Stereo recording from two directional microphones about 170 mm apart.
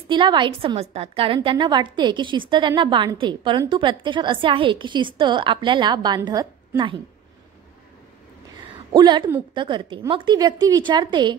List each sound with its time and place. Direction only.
0.1 s a woman's voice: 30° right (ahead or behind)
8.5 s a sound: 25° right (ahead or behind)
9.5 s a woman's voice: 30° right (ahead or behind)